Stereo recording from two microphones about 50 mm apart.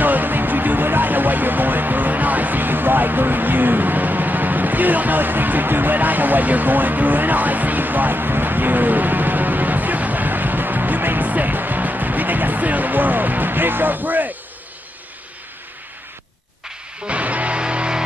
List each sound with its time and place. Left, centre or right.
0.0 s music: right
17.1 s music: right